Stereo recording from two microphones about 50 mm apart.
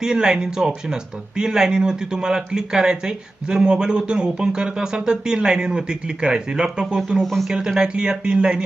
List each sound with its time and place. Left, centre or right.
0.0 s speech: centre
7.2 s speech: centre
7.5 s speech: centre